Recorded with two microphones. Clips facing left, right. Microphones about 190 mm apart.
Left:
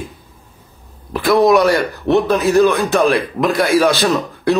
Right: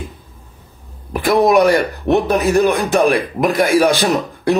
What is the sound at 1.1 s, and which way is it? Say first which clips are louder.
Speech: left 1 dB; 15° right (ahead or behind).